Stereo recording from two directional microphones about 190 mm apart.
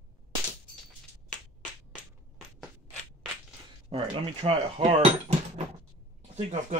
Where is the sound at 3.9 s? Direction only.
25° right (ahead or behind).